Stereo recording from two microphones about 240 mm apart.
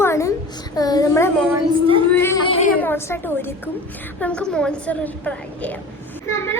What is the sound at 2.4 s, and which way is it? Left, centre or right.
Speech, left.